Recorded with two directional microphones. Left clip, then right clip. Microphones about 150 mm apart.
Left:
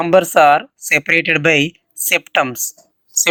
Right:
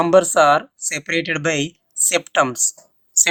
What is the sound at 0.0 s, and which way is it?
Speech, 20° left (ahead or behind).